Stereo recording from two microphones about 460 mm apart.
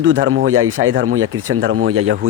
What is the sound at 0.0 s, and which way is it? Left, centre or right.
Speech, right.